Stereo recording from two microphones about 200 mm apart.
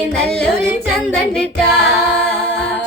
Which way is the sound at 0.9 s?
5° left (ahead or behind).